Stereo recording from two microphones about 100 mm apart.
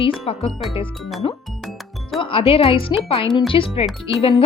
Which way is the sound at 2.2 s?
65° left (ahead or behind).